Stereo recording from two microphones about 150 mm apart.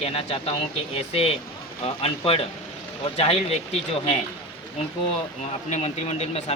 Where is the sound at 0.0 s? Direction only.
40° left (ahead or behind).